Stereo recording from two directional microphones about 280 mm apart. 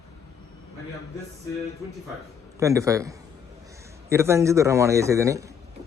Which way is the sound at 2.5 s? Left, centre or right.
Centre.